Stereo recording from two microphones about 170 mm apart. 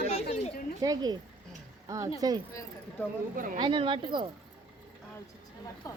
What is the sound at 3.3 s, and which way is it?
Speech, 55° right (ahead or behind).